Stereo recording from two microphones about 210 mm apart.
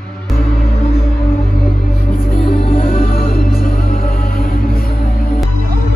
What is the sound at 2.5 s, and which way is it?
Music, 25° left (ahead or behind).